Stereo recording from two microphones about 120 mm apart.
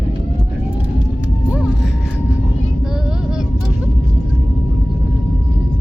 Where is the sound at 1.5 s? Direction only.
5° right (ahead or behind).